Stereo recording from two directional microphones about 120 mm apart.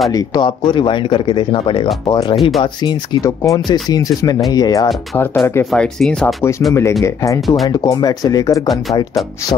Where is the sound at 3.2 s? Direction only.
25° left (ahead or behind).